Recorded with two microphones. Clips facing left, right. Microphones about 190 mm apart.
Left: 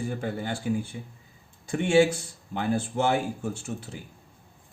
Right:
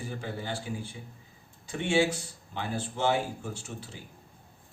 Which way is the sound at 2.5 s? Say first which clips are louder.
Left 7 dB; 55° left (ahead or behind).